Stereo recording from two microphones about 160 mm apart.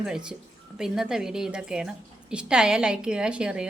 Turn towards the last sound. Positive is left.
turn(degrees=-5)  # may be behind; listen again after turning